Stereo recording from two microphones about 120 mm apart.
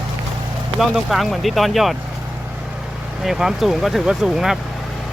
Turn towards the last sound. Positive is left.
turn(degrees=-5)  # may be behind; listen again after turning